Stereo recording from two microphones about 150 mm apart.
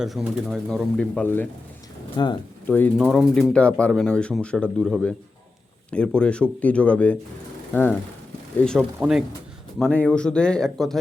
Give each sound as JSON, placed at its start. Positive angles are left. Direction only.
{"t": 0.0, "sound": "speech", "side_deg": 0}
{"t": 2.1, "sound": "speech", "side_deg": 30}
{"t": 2.6, "sound": "speech", "side_deg": 10}
{"t": 3.1, "sound": "speech", "side_deg": 0}
{"t": 8.8, "sound": "speech", "side_deg": -5}
{"t": 9.7, "sound": "speech", "side_deg": 5}